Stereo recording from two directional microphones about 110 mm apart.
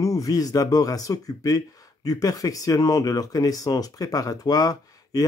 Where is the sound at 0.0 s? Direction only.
30° left (ahead or behind).